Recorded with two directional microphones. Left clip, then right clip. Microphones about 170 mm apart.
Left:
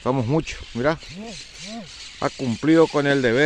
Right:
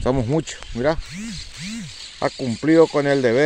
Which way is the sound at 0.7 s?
15° left (ahead or behind).